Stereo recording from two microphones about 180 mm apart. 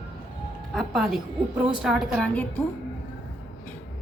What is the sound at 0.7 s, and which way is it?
A woman's voice, centre (ahead or behind).